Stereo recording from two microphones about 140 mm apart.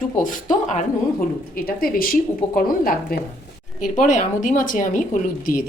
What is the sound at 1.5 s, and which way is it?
Speech, 90° left.